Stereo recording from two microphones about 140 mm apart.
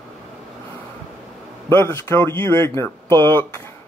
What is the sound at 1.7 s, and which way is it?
Speech, 20° left (ahead or behind).